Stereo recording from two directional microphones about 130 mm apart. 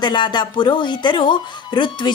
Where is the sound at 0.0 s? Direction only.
35° left (ahead or behind).